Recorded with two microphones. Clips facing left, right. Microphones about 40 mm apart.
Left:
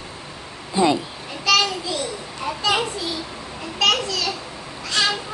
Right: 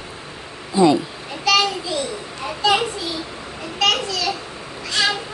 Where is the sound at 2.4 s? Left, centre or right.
Centre.